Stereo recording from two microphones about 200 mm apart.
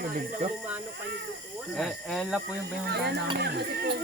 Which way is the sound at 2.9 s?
55° right (ahead or behind).